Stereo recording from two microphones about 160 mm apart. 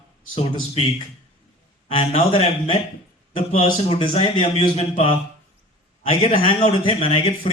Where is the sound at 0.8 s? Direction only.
40° left (ahead or behind).